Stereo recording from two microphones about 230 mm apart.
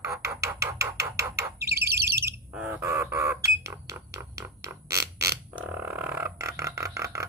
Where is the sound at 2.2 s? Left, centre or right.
Centre.